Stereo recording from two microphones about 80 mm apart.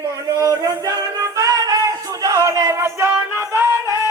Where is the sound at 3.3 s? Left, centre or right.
Right.